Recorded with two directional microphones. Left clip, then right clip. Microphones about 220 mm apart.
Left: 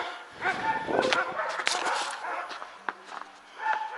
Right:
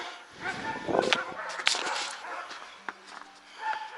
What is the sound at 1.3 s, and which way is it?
Dog, 15° right (ahead or behind).